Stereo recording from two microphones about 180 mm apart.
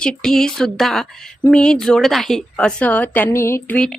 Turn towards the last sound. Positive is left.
turn(degrees=10)  # may be behind; listen again after turning